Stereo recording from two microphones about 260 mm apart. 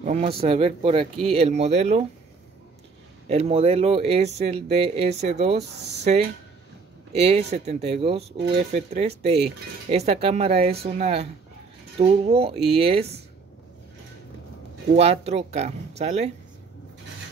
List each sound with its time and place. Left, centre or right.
0.0 s speech: right
3.3 s speech: right
5.8 s speech: right
7.2 s speech: right
15.0 s speech: right